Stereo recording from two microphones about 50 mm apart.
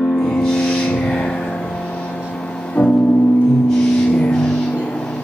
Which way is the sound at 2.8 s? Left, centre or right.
Left.